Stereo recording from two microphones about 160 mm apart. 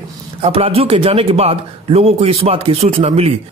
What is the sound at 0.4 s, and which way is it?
A man's voice, 35° right (ahead or behind).